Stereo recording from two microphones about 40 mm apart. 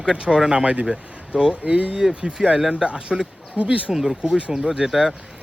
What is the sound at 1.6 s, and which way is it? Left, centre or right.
Speech, right.